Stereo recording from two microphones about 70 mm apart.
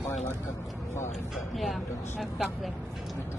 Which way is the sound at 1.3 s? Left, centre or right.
Centre.